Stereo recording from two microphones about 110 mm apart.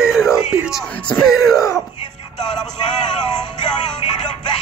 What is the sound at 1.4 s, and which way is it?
Speech, 30° left (ahead or behind).